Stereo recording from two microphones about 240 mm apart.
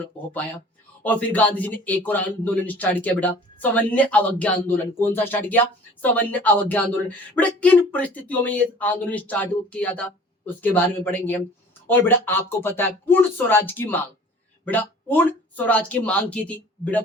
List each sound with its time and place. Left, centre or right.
1.0 s a man's voice: centre